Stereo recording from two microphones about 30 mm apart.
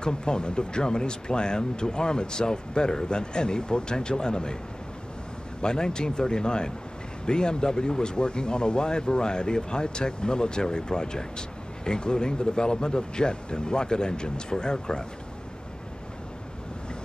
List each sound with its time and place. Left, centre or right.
0.0 s speech: left
5.6 s speech: left